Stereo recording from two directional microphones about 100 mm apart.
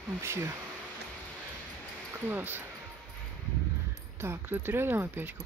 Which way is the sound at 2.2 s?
20° right (ahead or behind).